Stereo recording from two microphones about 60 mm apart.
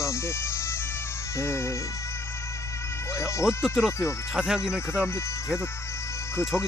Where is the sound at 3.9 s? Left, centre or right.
Left.